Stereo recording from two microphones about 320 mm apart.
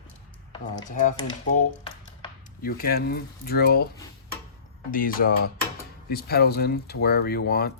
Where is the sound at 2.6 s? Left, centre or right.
Left.